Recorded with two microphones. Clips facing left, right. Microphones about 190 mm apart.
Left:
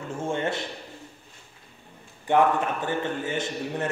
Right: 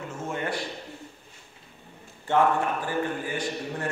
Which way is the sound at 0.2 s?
25° left (ahead or behind).